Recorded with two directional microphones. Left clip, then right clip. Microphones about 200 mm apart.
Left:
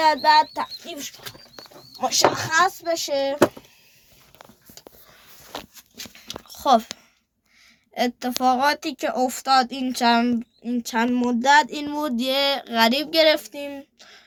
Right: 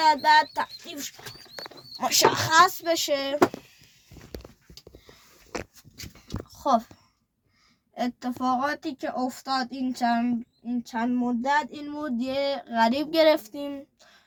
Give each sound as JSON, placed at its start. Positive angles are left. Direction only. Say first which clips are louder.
{"t": 0.0, "sound": "speech", "louder": "left 3 dB", "side_deg": -10}
{"t": 0.9, "sound": "speech", "louder": "left 3 dB", "side_deg": 0}
{"t": 2.0, "sound": "speech", "louder": "left 2 dB", "side_deg": -25}
{"t": 6.2, "sound": "a sound", "louder": "left 6 dB", "side_deg": 5}
{"t": 7.9, "sound": "a woman's voice", "louder": "left 6 dB", "side_deg": 15}